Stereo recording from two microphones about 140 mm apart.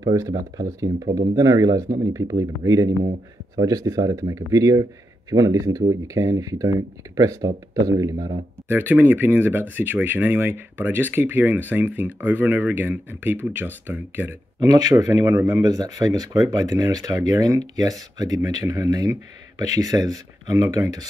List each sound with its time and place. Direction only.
0.0 s speech: 25° right (ahead or behind)
14.6 s speech: 25° right (ahead or behind)